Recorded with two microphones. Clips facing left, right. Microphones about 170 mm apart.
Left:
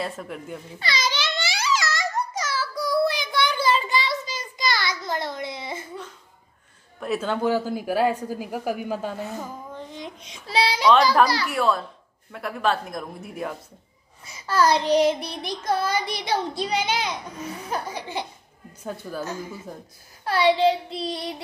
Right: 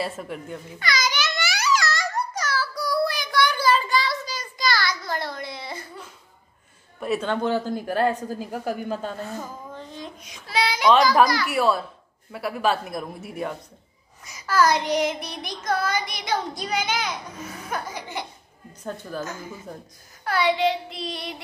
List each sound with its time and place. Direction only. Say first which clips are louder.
0.0 s speech: right 1 dB; 5° right (ahead or behind)
0.7 s babbling: right 1 dB; 30° left (ahead or behind)
7.0 s speech: even; centre (ahead or behind)
9.9 s child singing: left 1 dB; 25° left (ahead or behind)
11.4 s speech: right 1 dB; 5° right (ahead or behind)
14.2 s a sound: even; 30° left (ahead or behind)
14.9 s child singing: left 4 dB; 30° left (ahead or behind)
18.9 s speech: even; 5° left (ahead or behind)
20.2 s child singing: left 3 dB; 30° left (ahead or behind)